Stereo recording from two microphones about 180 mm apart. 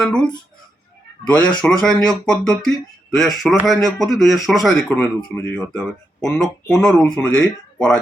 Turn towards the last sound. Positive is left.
turn(degrees=5)  # may be behind; listen again after turning